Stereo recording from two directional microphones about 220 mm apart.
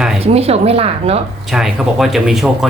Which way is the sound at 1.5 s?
Centre (ahead or behind).